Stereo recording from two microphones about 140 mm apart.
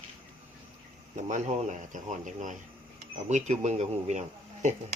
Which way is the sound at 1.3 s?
60° right (ahead or behind).